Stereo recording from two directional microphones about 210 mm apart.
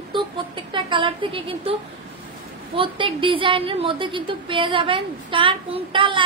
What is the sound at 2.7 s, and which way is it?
A woman's voice, 25° right (ahead or behind).